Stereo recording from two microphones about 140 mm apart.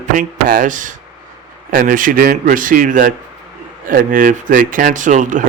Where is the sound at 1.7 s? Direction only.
80° right.